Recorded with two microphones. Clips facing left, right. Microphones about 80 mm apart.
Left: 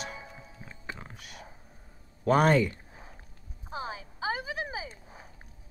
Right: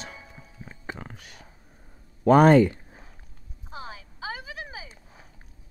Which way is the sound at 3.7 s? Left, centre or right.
Left.